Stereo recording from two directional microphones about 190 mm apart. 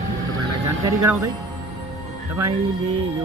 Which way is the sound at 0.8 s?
15° right (ahead or behind).